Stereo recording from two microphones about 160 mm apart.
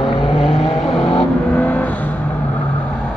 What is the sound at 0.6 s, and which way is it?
Vehicle, 35° left (ahead or behind).